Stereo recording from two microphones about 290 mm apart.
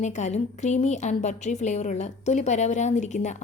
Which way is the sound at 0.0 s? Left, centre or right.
Left.